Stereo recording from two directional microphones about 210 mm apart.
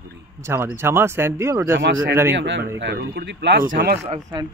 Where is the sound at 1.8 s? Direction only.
60° right (ahead or behind).